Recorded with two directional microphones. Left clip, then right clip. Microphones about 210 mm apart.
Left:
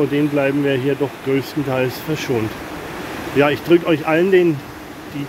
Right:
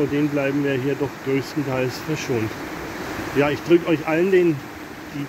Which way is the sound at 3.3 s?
10° left (ahead or behind).